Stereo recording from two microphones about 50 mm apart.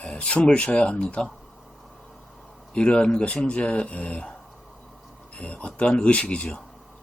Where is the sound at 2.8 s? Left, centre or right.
Centre.